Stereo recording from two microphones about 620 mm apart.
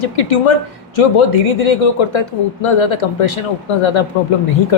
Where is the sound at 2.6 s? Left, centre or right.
Left.